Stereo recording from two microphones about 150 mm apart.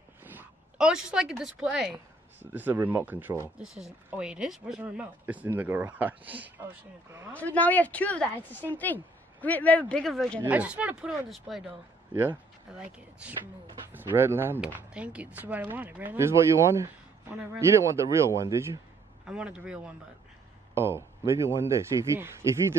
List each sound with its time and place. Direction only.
0.2 s speech: 10° right (ahead or behind)
7.3 s speech: 10° left (ahead or behind)
10.4 s speech: 10° right (ahead or behind)
12.1 s speech: 15° right (ahead or behind)
19.2 s speech: 5° right (ahead or behind)